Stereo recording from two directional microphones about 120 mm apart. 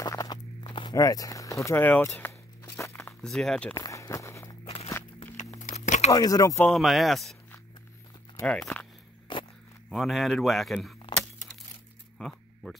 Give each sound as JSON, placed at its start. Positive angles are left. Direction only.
{"t": 0.0, "sound": "walk", "side_deg": 30}
{"t": 3.2, "sound": "a man's voice", "side_deg": 5}
{"t": 3.7, "sound": "walk", "side_deg": 30}
{"t": 5.4, "sound": "a sound", "side_deg": 80}
{"t": 6.1, "sound": "speech", "side_deg": 30}
{"t": 6.6, "sound": "a man's voice", "side_deg": 0}
{"t": 8.5, "sound": "speech", "side_deg": 5}
{"t": 9.3, "sound": "a sound", "side_deg": 40}
{"t": 9.8, "sound": "a man's voice", "side_deg": 0}
{"t": 12.2, "sound": "a sound", "side_deg": 0}